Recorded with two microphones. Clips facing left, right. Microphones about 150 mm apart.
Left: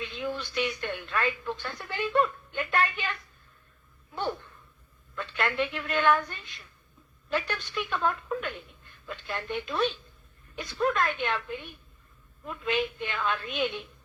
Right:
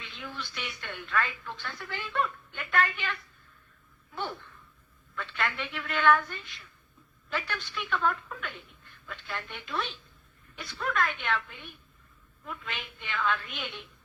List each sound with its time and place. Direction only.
0.0 s speech: 20° left (ahead or behind)
4.1 s a sound: 20° left (ahead or behind)
5.5 s speech: 20° left (ahead or behind)